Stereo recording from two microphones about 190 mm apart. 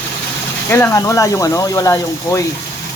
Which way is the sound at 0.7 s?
15° left (ahead or behind).